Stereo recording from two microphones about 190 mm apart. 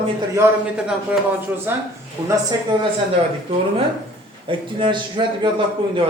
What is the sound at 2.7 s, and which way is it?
Speech, 25° right (ahead or behind).